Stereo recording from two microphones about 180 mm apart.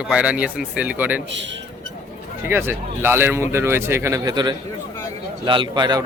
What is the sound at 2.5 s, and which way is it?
A man's voice, 15° right (ahead or behind).